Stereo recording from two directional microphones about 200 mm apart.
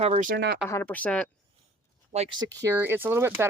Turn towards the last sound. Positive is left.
turn(degrees=-10)  # may be behind; listen again after turning